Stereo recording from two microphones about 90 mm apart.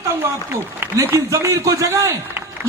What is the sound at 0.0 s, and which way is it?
A man's voice, 25° right (ahead or behind).